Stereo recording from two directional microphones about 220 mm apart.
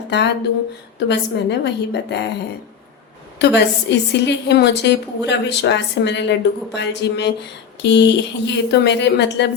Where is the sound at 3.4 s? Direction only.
50° left (ahead or behind).